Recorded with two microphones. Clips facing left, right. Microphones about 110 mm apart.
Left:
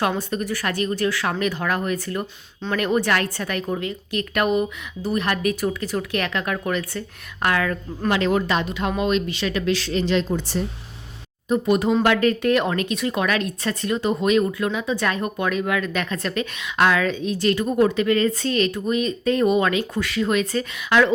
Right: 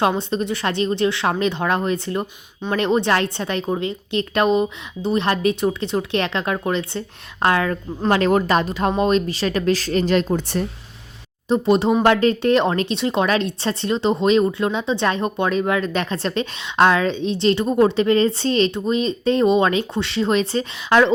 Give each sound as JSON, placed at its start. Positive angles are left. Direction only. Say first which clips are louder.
{"t": 0.0, "sound": "speech", "louder": "right 4 dB", "side_deg": -25}
{"t": 8.1, "sound": "a woman's voice", "louder": "right 4 dB", "side_deg": -40}
{"t": 11.4, "sound": "speech", "louder": "right 3 dB", "side_deg": -25}